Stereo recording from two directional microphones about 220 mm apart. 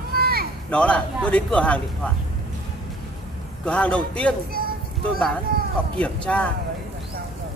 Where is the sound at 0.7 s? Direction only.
5° left (ahead or behind).